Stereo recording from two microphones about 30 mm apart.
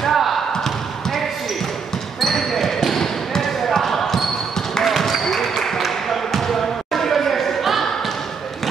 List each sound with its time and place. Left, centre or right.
0.1 s basketball bounce: centre
2.1 s basketball bounce: centre